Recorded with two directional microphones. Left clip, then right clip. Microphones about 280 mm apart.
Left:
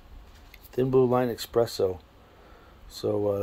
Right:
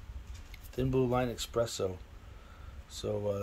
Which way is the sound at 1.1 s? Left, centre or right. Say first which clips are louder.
Left 7 dB; centre.